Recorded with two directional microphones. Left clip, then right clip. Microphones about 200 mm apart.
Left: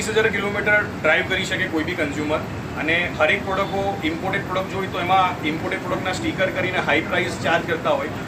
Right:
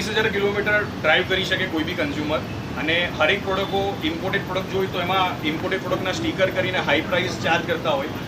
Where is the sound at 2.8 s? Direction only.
Centre (ahead or behind).